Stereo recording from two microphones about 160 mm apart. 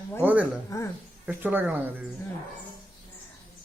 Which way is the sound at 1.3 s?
10° right (ahead or behind).